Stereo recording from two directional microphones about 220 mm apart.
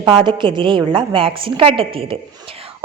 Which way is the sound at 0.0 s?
20° right (ahead or behind).